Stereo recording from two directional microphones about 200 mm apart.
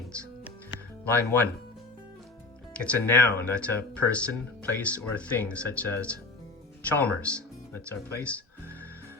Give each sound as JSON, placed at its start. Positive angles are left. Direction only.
{"t": 1.0, "sound": "speech", "side_deg": 10}
{"t": 2.7, "sound": "speech", "side_deg": 5}